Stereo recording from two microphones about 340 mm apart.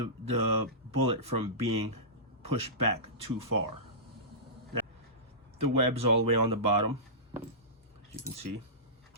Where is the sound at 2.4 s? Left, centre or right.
Right.